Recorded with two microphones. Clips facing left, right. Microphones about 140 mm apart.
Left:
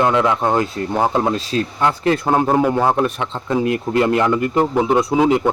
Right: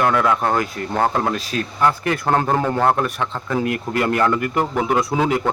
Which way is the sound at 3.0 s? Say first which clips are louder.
Left 3 dB; 20° left (ahead or behind).